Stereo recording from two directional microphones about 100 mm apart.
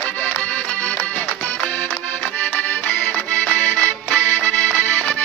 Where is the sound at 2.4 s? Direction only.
15° left (ahead or behind).